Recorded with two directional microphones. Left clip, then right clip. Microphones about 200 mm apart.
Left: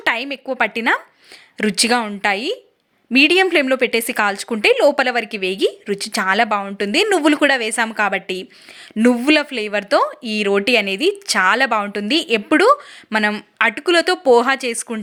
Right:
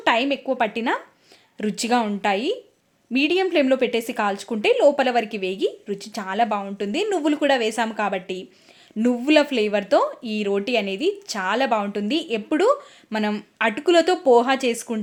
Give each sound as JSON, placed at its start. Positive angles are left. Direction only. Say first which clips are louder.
{"t": 0.0, "sound": "speech", "louder": "even", "side_deg": 10}